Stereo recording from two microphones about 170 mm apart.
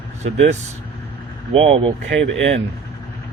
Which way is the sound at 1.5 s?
35° right (ahead or behind).